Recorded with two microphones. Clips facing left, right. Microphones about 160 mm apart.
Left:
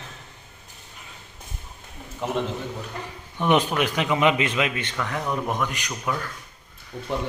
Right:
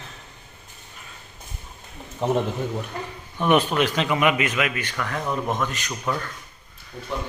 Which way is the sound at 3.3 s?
15° left (ahead or behind).